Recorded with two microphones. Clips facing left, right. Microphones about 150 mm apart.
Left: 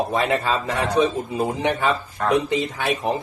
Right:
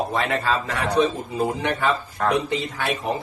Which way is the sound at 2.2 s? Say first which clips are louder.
Left 1 dB; centre (ahead or behind).